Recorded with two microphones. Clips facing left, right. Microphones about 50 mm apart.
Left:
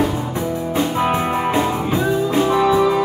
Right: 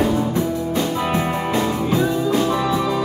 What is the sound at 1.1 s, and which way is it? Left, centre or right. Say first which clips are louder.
Music: left 2 dB; left.